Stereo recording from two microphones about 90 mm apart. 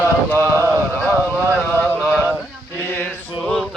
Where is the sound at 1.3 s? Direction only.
15° right (ahead or behind).